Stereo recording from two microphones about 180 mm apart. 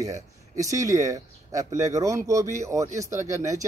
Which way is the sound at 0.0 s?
20° right (ahead or behind).